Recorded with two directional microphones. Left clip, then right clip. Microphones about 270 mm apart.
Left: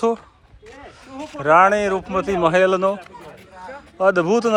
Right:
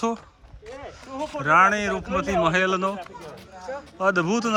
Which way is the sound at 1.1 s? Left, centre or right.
Right.